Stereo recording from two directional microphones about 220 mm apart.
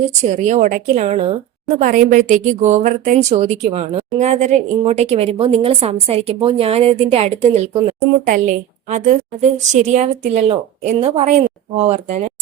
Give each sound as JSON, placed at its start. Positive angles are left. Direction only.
{"t": 0.1, "sound": "a woman's voice", "side_deg": -30}
{"t": 8.3, "sound": "a woman's voice", "side_deg": -35}